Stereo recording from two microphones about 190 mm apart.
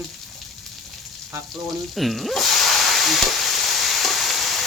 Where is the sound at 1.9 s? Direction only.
Centre (ahead or behind).